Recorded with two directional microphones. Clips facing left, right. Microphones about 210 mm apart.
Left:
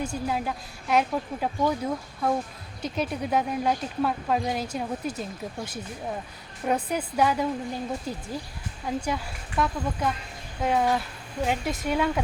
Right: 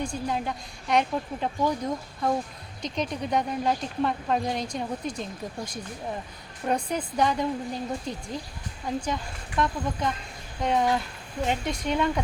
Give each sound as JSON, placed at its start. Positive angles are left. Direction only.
{"t": 0.0, "sound": "speech", "side_deg": 5}